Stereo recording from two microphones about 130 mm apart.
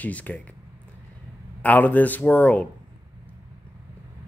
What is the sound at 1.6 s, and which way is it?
Speech, 10° left (ahead or behind).